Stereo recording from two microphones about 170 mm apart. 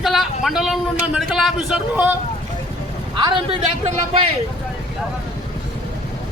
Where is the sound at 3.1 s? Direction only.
30° right (ahead or behind).